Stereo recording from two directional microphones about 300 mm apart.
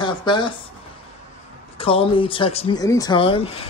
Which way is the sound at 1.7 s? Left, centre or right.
Centre.